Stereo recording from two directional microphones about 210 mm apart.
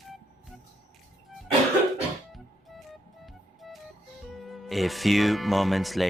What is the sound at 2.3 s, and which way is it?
Music, centre (ahead or behind).